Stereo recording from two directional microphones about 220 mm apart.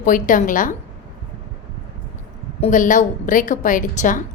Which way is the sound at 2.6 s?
35° left (ahead or behind).